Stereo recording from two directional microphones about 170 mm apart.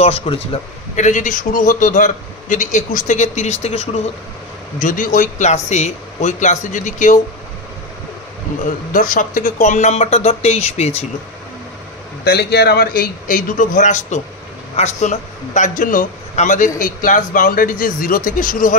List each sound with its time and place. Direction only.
0.0 s speech: 35° left (ahead or behind)
0.9 s a man's voice: 45° left (ahead or behind)
8.9 s speech: 55° left (ahead or behind)
12.3 s a man's voice: 75° left (ahead or behind); by 18.8 s 50° left (ahead or behind)